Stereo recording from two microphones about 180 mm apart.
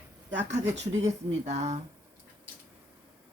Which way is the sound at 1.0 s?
40° right (ahead or behind).